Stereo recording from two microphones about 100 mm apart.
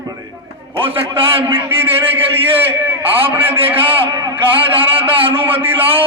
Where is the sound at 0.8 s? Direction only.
65° right (ahead or behind).